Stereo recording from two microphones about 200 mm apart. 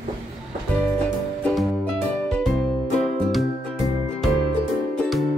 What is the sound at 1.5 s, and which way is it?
Music, 5° left (ahead or behind).